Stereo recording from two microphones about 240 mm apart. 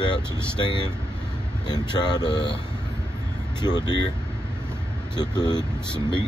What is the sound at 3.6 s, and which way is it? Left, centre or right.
Speech, centre.